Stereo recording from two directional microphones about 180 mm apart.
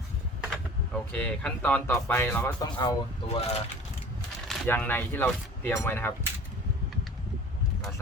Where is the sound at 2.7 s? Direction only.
25° left (ahead or behind).